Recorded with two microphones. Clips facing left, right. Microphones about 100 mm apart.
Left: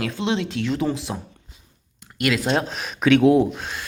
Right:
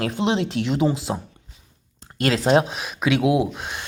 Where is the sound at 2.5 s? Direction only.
10° right (ahead or behind).